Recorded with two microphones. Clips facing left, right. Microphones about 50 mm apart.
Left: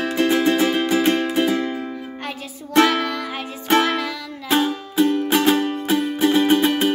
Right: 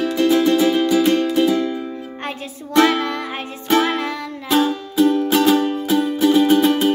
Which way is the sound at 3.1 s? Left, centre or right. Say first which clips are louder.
Right 1 dB; right.